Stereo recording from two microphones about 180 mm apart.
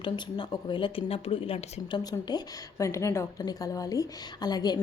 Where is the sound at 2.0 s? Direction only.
20° left (ahead or behind).